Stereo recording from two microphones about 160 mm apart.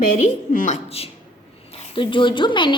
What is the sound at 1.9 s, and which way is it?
Speech, 30° left (ahead or behind).